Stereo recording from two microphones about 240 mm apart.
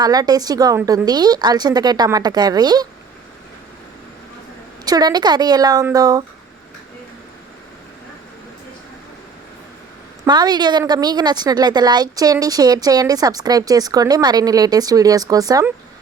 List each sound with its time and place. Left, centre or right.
0.0 s a woman's voice: centre
4.9 s a woman's voice: centre
10.2 s a woman's voice: centre